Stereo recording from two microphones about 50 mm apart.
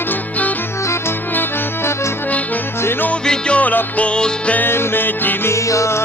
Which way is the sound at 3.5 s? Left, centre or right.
Left.